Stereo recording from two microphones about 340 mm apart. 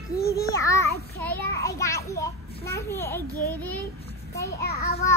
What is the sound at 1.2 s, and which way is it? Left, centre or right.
A child's voice, centre.